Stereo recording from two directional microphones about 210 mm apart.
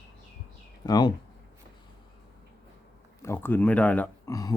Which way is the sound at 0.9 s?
20° left (ahead or behind).